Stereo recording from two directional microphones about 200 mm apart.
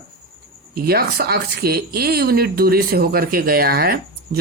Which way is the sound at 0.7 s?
50° right (ahead or behind).